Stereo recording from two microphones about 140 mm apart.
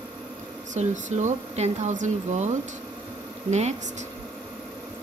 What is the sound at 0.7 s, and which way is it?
Speech, 60° right (ahead or behind).